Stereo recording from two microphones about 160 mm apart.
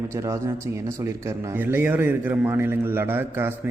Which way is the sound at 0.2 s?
20° right (ahead or behind).